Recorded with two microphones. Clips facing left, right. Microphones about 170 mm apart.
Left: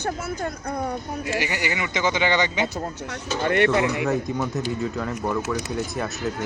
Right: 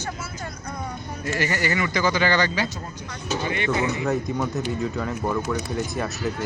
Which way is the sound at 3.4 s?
65° left (ahead or behind).